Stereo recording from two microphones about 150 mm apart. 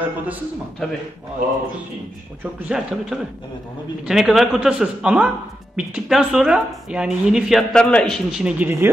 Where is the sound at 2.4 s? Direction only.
5° right (ahead or behind).